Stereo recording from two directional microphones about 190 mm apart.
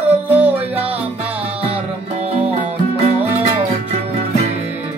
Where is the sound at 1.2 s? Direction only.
30° right (ahead or behind).